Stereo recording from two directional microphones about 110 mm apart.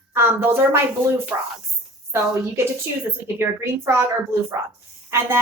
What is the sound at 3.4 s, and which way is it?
Speech, 25° right (ahead or behind).